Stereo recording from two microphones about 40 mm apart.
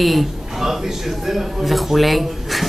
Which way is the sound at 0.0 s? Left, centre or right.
Centre.